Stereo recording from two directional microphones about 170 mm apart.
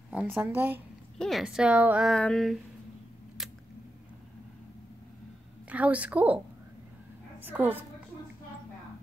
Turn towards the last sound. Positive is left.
turn(degrees=-10)  # may be behind; listen again after turning